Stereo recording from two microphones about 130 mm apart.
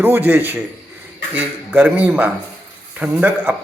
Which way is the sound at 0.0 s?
15° right (ahead or behind).